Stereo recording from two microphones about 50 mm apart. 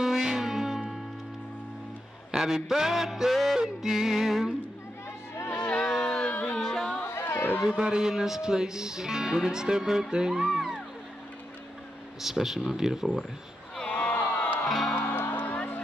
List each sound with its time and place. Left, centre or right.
0.0 s music: centre
2.3 s speech: centre
5.5 s a sound: left
5.8 s a sound: centre
6.6 s music: centre
7.1 s chatter: left
7.7 s speech: centre
12.2 s speech: centre
13.8 s crowd: left
14.7 s music: centre
15.0 s music: left
15.5 s music: left